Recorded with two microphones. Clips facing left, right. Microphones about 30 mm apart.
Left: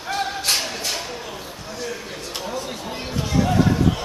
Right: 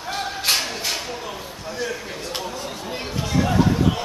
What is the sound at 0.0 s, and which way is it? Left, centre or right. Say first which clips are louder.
Music: left 1 dB; centre.